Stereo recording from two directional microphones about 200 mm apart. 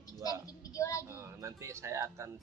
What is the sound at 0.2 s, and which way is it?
Child singing, 15° left (ahead or behind).